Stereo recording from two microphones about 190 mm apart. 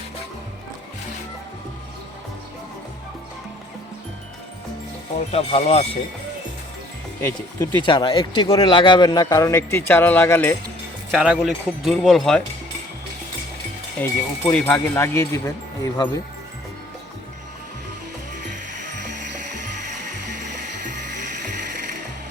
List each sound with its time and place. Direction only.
5.3 s speech: 35° left (ahead or behind)
7.2 s speech: 15° left (ahead or behind)
11.1 s speech: 5° right (ahead or behind)
14.0 s speech: 10° left (ahead or behind)